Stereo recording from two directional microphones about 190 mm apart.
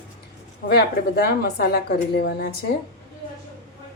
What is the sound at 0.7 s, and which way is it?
Speech, 60° left (ahead or behind).